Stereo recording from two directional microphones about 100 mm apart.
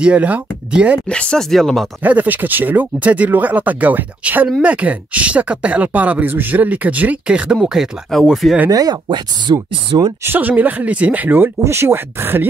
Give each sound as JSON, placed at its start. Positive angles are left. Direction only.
{"t": 0.0, "sound": "speech", "side_deg": -15}
{"t": 1.0, "sound": "speech", "side_deg": 10}
{"t": 2.0, "sound": "speech", "side_deg": -15}
{"t": 8.6, "sound": "speech", "side_deg": -40}
{"t": 10.2, "sound": "speech", "side_deg": -20}